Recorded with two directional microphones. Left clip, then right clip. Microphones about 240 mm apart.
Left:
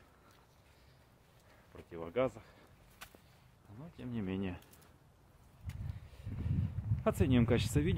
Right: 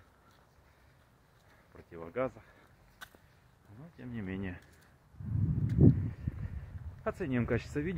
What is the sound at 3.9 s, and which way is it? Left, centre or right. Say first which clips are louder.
Speech: left 1 dB; centre.